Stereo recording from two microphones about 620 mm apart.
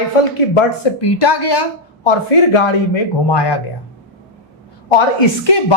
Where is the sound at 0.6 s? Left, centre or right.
Left.